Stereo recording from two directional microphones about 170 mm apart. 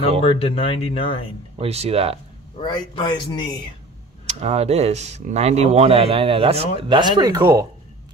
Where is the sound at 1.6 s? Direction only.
35° right (ahead or behind).